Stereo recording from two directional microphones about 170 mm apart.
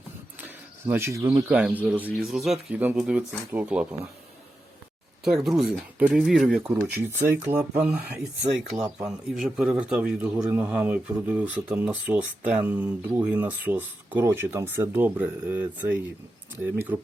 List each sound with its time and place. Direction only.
0.4 s cricket: 15° right (ahead or behind)
1.5 s speech: 5° right (ahead or behind)
5.2 s speech: centre (ahead or behind)
16.9 s speech: 15° right (ahead or behind)